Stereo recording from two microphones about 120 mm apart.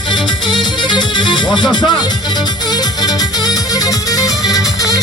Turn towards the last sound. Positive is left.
turn(degrees=30)  # may be behind; listen again after turning